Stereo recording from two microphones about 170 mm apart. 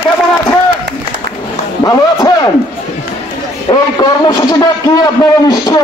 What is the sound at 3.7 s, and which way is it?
A man's voice, 25° left (ahead or behind).